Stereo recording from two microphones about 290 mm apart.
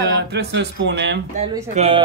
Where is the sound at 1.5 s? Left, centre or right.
Centre.